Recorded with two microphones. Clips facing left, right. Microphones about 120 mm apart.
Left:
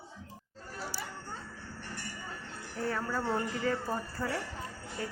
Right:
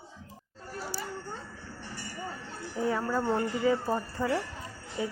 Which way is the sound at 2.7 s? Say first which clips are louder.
Right 5 dB; 15° right (ahead or behind).